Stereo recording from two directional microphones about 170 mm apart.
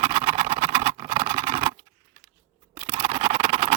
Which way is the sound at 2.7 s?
30° right (ahead or behind).